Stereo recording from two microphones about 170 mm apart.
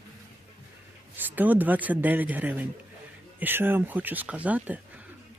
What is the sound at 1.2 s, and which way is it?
Speech, 10° right (ahead or behind).